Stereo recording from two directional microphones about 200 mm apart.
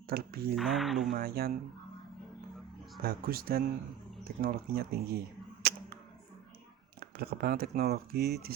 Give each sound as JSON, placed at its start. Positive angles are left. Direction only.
{"t": 0.1, "sound": "speech", "side_deg": -50}
{"t": 0.5, "sound": "speech", "side_deg": 0}
{"t": 1.1, "sound": "speech", "side_deg": -50}
{"t": 3.0, "sound": "speech", "side_deg": -50}
{"t": 5.6, "sound": "a sound", "side_deg": -50}
{"t": 7.0, "sound": "speech", "side_deg": -50}